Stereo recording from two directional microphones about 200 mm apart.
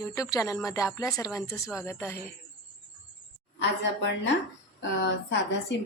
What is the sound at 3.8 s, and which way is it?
Speech, 60° left (ahead or behind).